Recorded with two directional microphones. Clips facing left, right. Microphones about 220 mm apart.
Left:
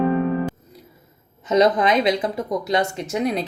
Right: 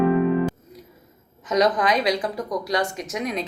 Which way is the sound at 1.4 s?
25° left (ahead or behind).